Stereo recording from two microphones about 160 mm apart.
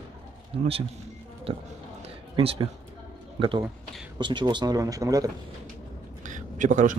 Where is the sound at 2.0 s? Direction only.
35° right (ahead or behind).